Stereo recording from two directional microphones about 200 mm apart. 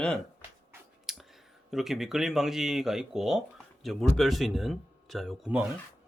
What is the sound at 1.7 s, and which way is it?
Speech, centre (ahead or behind).